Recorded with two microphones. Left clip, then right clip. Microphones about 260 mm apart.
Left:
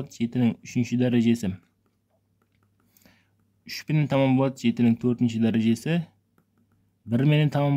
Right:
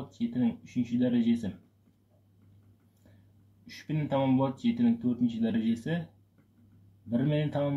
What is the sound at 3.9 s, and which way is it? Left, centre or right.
Speech, left.